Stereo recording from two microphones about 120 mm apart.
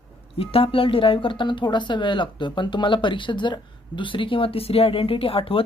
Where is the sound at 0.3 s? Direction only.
50° left (ahead or behind).